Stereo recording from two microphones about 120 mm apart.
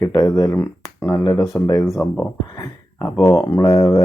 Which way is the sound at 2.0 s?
10° left (ahead or behind).